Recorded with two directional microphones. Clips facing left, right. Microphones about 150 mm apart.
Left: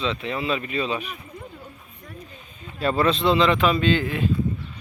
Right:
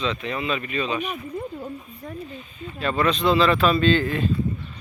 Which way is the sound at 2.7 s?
35° left (ahead or behind).